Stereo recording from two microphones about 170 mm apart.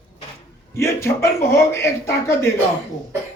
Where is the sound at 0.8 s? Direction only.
15° left (ahead or behind).